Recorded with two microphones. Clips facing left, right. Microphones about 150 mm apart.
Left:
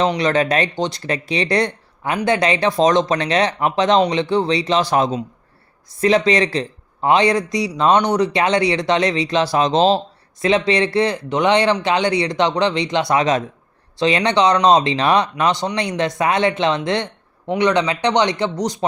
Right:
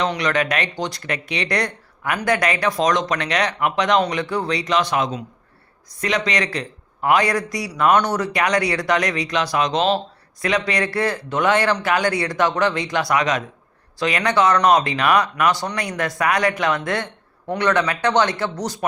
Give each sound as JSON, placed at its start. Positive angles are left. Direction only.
{"t": 0.0, "sound": "a man's voice", "side_deg": 30}